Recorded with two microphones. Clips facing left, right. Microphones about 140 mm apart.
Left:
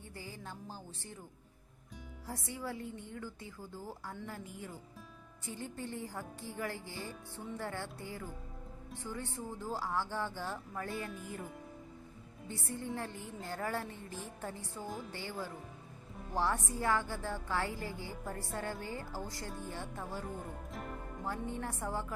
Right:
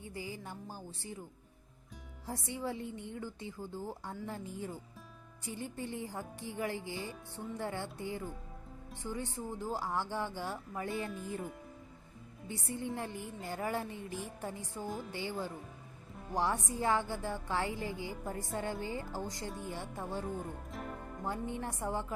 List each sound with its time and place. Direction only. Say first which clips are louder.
0.1 s a woman's voice: right 3 dB; 15° right (ahead or behind)
2.2 s a woman's voice: right 3 dB; 20° right (ahead or behind)
5.5 s a woman's voice: right 2 dB; 15° right (ahead or behind)
12.5 s a woman's voice: right 2 dB; 15° right (ahead or behind)
14.8 s speech: right 2 dB; centre (ahead or behind)
15.1 s a woman's voice: right 3 dB; 15° right (ahead or behind)
20.2 s speech: right 3 dB; centre (ahead or behind)
21.2 s a woman's voice: right 1 dB; 15° right (ahead or behind)